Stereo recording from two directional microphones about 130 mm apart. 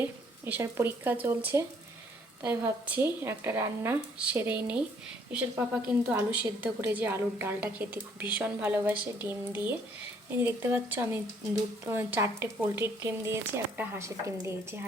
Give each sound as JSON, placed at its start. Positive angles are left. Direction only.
{"t": 0.0, "sound": "a woman's voice", "side_deg": -15}